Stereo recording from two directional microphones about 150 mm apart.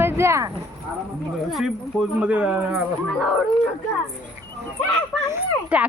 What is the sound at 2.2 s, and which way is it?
Speech, 10° right (ahead or behind).